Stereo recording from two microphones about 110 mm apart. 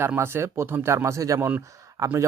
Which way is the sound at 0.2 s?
20° right (ahead or behind).